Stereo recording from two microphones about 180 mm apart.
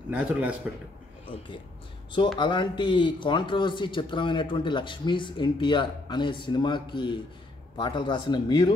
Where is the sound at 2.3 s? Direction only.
25° left (ahead or behind).